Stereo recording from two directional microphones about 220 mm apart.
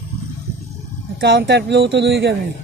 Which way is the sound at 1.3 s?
55° right (ahead or behind).